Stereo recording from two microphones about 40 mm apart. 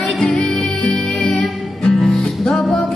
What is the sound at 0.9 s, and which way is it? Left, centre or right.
Music, left.